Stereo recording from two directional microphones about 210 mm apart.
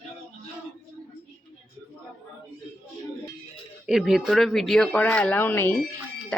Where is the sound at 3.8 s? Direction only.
Centre (ahead or behind).